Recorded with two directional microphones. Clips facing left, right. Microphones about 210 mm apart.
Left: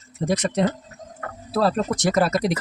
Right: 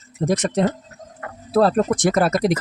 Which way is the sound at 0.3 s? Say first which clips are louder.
Right 2 dB; 50° right (ahead or behind).